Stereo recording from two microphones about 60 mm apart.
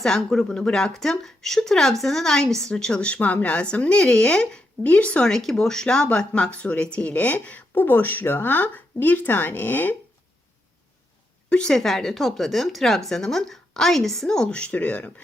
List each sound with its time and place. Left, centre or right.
0.0 s speech: centre
5.3 s speech: centre; by 9.9 s left
11.4 s speech: centre